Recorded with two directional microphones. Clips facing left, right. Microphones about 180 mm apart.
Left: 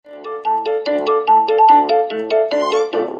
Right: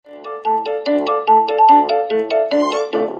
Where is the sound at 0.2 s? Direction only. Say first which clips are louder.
Even; centre (ahead or behind).